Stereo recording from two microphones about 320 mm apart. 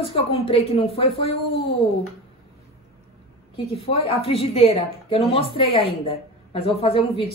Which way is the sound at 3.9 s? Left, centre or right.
Centre.